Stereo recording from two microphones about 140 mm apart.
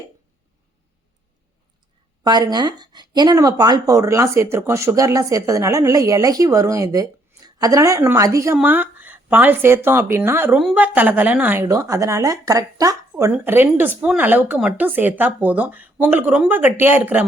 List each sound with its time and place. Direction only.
2.2 s speech: 30° right (ahead or behind)
10.6 s speech: 5° right (ahead or behind)